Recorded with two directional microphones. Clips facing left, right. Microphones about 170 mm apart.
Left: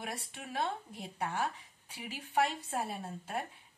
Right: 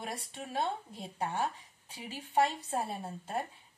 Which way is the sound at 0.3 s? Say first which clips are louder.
Right 2 dB; 25° right (ahead or behind).